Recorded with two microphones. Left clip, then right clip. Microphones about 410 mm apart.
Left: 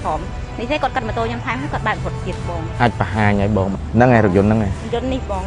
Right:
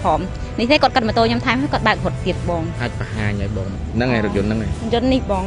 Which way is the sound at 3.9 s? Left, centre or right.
Centre.